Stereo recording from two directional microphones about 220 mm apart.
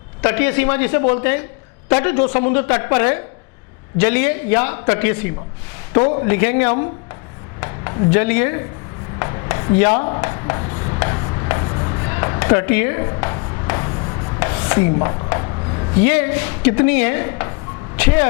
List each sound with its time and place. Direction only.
0.2 s a man's voice: 15° left (ahead or behind)
1.0 s a woman's voice: 25° left (ahead or behind)
2.1 s a woman's voice: 30° left (ahead or behind); by 5.3 s 15° left (ahead or behind)
5.9 s a woman's voice: 30° left (ahead or behind)
6.2 s a man's voice: 15° left (ahead or behind)
9.1 s chopping: 20° left (ahead or behind)
15.0 s a man's voice: 20° left (ahead or behind)